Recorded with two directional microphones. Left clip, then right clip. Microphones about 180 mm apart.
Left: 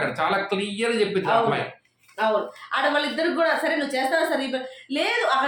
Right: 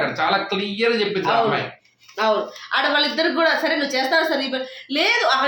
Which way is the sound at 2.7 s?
15° right (ahead or behind).